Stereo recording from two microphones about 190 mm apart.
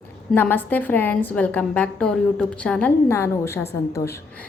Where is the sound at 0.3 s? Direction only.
10° left (ahead or behind).